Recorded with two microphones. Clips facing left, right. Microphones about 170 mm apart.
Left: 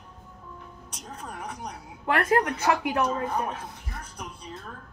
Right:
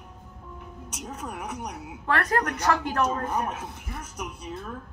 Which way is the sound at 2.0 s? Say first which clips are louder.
Left 2 dB; 20° left (ahead or behind).